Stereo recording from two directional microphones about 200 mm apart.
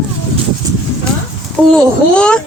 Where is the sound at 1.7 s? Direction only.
5° left (ahead or behind).